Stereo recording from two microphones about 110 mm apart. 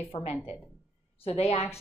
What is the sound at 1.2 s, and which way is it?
Speech, 65° left (ahead or behind).